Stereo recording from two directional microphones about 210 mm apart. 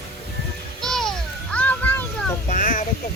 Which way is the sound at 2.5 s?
40° left (ahead or behind).